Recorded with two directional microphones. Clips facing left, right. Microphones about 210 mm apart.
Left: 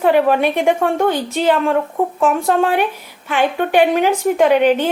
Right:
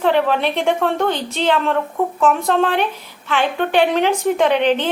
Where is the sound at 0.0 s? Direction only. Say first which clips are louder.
Left 3 dB; 10° left (ahead or behind).